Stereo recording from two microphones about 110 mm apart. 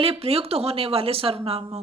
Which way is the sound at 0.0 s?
65° right (ahead or behind).